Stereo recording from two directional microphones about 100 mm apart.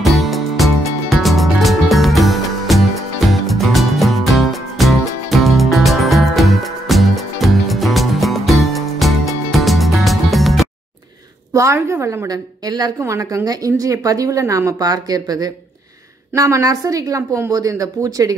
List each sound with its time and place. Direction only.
0.0 s music: centre (ahead or behind)
11.5 s a woman's voice: 30° right (ahead or behind)
12.3 s speech: 40° right (ahead or behind)